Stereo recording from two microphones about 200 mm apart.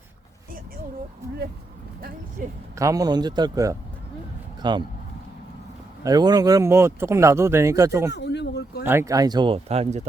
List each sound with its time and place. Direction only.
2.4 s speech: 45° right (ahead or behind)
2.7 s speech: 15° right (ahead or behind)
6.0 s speech: 20° right (ahead or behind)
8.1 s a sound: 60° left (ahead or behind)
8.8 s speech: 10° right (ahead or behind); by 10.1 s 30° right (ahead or behind)